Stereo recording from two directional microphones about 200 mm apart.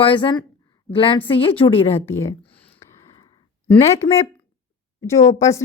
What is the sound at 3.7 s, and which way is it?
A woman's voice, 15° left (ahead or behind).